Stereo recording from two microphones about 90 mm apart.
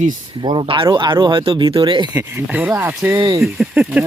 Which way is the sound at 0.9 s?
60° right (ahead or behind).